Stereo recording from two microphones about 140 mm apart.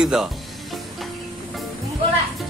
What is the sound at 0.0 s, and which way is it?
Speech, 5° right (ahead or behind).